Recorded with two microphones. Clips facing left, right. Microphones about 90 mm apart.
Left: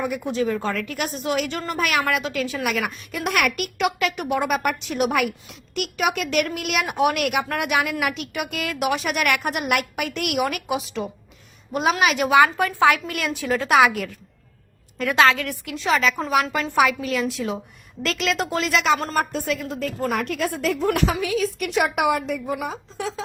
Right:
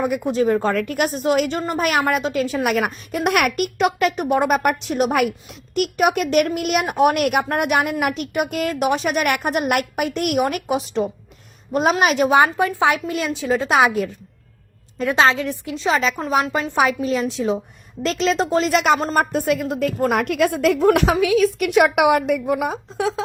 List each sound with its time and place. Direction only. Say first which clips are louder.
0.0 s a woman's voice: right 5 dB; 45° right (ahead or behind)
12.5 s speech: even; 20° right (ahead or behind)
16.3 s a woman's voice: right 3 dB; 30° right (ahead or behind)
18.7 s a woman's voice: right 3 dB; 45° right (ahead or behind)
21.2 s a woman's voice: right 7 dB; 80° right; by 23.2 s 60° right (ahead or behind)